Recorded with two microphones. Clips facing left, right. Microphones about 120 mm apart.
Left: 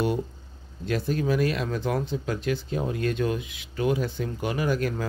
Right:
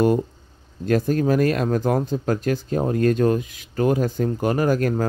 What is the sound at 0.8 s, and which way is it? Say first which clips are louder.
Speech: right 6 dB; 45° right (ahead or behind).